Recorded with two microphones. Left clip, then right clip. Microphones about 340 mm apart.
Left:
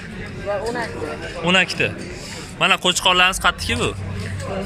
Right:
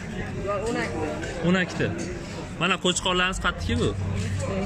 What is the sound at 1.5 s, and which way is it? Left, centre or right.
A man's voice, centre.